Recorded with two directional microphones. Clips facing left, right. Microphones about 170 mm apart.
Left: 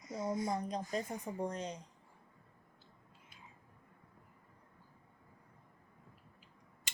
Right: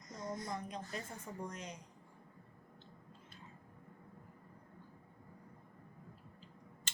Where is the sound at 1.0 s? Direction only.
15° left (ahead or behind).